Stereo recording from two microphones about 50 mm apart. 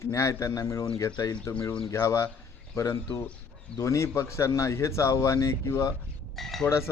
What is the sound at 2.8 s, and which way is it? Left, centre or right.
Speech, left.